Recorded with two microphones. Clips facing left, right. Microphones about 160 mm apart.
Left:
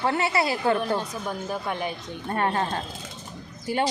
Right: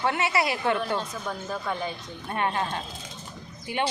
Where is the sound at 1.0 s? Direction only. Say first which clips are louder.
Left 2 dB; 15° left (ahead or behind).